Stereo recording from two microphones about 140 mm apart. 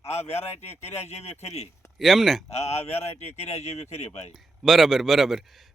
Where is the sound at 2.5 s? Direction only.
50° left (ahead or behind).